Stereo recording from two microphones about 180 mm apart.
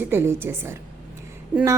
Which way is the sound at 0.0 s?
10° right (ahead or behind).